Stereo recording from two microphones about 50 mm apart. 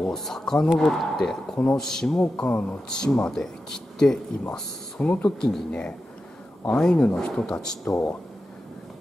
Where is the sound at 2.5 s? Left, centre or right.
Left.